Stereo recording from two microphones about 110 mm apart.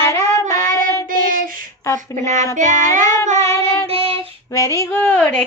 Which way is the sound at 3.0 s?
25° left (ahead or behind).